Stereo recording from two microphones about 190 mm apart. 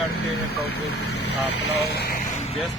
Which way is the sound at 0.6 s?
60° left (ahead or behind).